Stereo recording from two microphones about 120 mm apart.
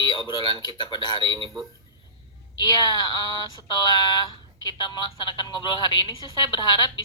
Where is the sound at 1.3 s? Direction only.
40° right (ahead or behind).